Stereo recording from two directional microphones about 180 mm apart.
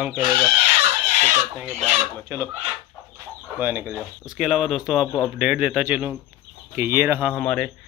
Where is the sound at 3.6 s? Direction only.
10° right (ahead or behind).